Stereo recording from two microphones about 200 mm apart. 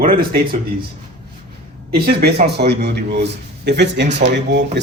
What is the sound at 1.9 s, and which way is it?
A man's voice, 50° right (ahead or behind).